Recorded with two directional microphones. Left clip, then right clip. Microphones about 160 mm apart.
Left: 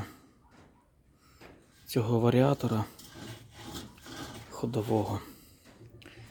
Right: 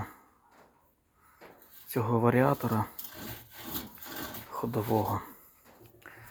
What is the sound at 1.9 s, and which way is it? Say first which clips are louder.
Speech: right 1 dB; 35° left (ahead or behind).